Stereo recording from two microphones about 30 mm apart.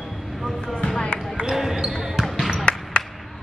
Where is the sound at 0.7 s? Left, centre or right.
Left.